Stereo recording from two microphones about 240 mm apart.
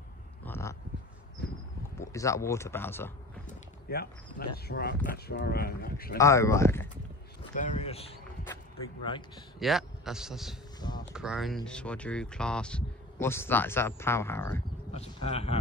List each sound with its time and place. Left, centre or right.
0.5 s a sound: centre
1.4 s a sound: left
2.0 s speech: centre
3.4 s speech: left
6.1 s speech: centre
7.5 s speech: left
9.6 s a man's voice: centre
14.9 s speech: left